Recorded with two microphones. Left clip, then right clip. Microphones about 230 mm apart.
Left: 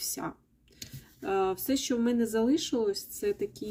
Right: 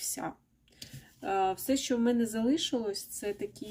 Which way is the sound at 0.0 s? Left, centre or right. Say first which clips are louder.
Left 1 dB; centre.